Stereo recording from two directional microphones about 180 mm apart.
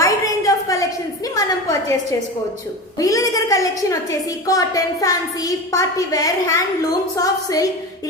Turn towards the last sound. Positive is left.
turn(degrees=20)  # may be behind; listen again after turning